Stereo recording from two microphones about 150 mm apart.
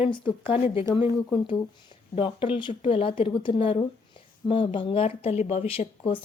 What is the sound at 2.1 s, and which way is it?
Speech, 35° left (ahead or behind).